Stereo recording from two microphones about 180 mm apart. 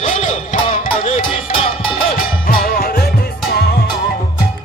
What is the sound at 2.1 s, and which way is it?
Music, 55° left (ahead or behind).